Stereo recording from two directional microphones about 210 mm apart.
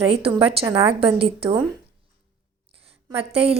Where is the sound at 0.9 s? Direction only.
25° right (ahead or behind).